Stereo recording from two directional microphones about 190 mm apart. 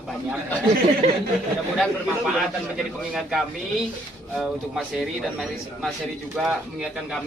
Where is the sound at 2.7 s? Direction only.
Centre (ahead or behind).